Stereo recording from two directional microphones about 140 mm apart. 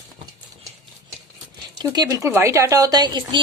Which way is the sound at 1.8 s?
30° right (ahead or behind).